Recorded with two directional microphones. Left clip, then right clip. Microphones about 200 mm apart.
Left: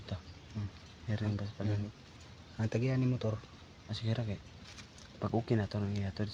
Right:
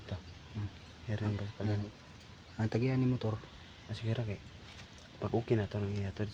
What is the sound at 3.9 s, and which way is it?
Speech, 15° left (ahead or behind).